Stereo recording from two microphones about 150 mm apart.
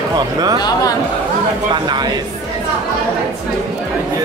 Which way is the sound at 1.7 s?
30° right (ahead or behind).